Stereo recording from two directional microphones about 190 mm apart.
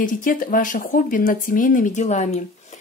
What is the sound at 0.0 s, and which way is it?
Speech, 45° left (ahead or behind).